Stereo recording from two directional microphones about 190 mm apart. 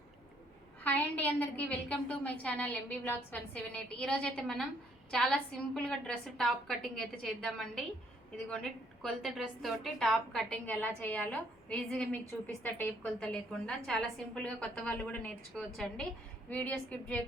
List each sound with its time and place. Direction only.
0.9 s a woman's voice: 10° left (ahead or behind)